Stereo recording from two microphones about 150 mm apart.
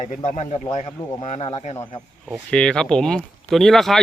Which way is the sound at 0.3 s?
50° left (ahead or behind).